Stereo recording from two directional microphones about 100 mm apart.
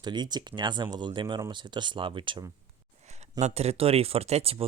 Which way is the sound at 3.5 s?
90° right.